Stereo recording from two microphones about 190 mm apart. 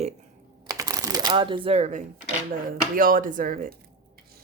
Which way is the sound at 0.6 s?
20° right (ahead or behind).